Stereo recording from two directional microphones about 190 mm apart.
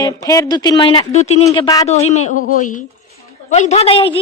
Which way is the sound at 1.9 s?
35° left (ahead or behind).